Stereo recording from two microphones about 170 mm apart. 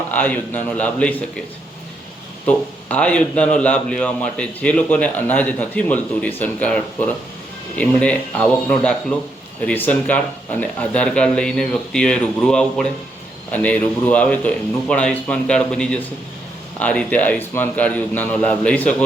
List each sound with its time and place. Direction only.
0.1 s a man's voice: 10° left (ahead or behind)
2.5 s a man's voice: 5° left (ahead or behind)